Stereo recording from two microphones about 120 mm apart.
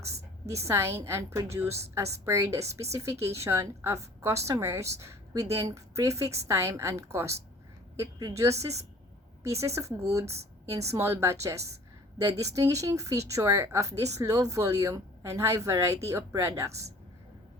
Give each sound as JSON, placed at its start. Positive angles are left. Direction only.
{"t": 0.7, "sound": "speech", "side_deg": -20}
{"t": 9.4, "sound": "speech", "side_deg": -25}